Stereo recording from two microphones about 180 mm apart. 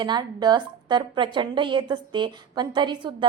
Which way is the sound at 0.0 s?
25° right (ahead or behind).